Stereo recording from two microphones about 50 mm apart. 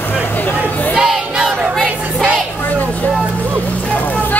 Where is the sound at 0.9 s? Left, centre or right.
Centre.